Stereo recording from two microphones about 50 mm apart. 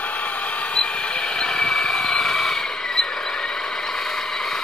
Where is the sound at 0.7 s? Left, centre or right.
Left.